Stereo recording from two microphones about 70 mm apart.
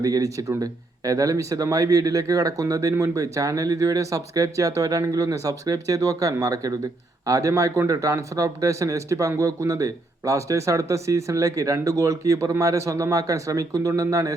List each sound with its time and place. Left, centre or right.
0.0 s speech: right